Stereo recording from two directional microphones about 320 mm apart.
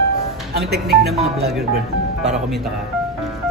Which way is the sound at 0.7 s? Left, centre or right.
Right.